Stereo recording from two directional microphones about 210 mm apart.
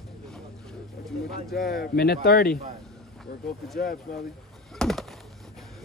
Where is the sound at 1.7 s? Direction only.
45° left (ahead or behind).